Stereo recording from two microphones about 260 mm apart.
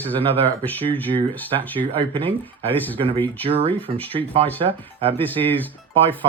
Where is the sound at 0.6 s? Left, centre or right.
Centre.